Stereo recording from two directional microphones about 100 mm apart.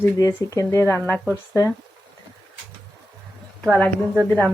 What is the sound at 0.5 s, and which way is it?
Speech, 35° left (ahead or behind).